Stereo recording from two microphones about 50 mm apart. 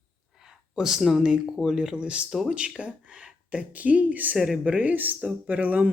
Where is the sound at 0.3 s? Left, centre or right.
Centre.